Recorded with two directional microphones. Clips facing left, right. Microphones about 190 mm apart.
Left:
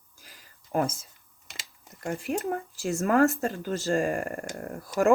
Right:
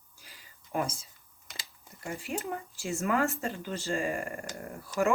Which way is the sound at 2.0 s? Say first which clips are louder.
Left 6 dB; 50° left (ahead or behind).